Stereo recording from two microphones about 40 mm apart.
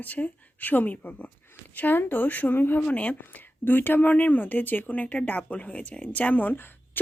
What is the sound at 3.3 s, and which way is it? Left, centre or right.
A woman's voice, left.